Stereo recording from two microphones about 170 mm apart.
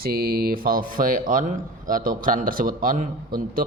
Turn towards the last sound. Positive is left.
turn(degrees=-55)  # may be behind; listen again after turning